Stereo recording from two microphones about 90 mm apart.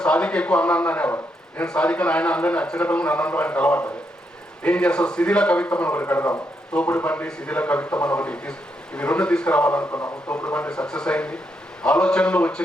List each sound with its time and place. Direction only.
0.0 s a man's voice: 15° left (ahead or behind)
10.3 s a man's voice: 15° left (ahead or behind)